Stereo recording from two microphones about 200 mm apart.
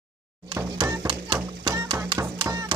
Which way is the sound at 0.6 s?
15° right (ahead or behind).